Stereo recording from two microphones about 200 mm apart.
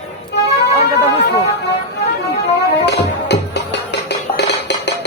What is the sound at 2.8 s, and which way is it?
Music, 55° left (ahead or behind).